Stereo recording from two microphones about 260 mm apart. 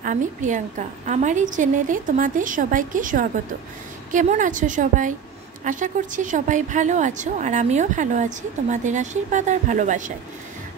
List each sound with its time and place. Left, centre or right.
0.0 s a woman's voice: right